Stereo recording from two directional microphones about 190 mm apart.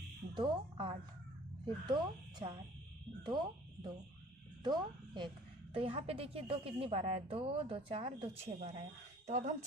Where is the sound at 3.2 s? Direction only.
25° right (ahead or behind).